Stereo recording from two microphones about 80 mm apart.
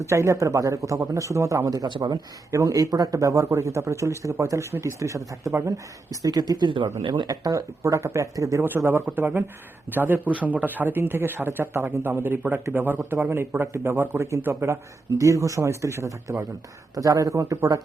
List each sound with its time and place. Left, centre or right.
0.0 s speech: right
1.9 s speech: right
2.5 s speech: right
6.2 s speech: right
7.3 s speech: right
8.9 s speech: right